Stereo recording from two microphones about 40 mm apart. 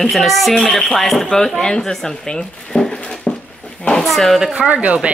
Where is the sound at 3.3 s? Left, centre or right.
Left.